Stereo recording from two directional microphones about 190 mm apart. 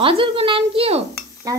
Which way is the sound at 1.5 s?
20° right (ahead or behind).